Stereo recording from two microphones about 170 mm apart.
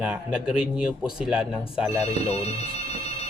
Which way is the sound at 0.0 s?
5° right (ahead or behind).